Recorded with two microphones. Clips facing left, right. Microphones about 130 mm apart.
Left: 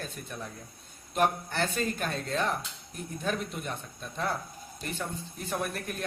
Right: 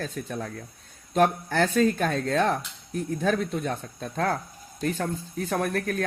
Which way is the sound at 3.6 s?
90° right.